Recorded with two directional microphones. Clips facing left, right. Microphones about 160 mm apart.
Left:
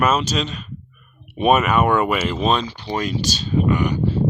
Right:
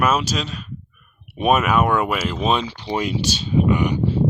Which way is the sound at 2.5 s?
20° right (ahead or behind).